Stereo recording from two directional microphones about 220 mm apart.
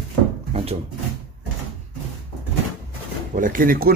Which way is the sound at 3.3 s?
35° right (ahead or behind).